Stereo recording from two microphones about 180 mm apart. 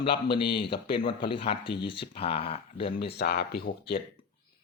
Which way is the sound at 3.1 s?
60° left (ahead or behind).